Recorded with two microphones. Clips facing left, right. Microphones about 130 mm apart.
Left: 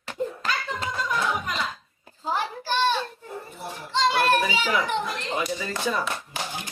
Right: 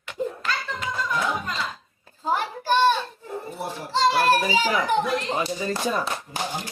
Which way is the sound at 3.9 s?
35° right (ahead or behind).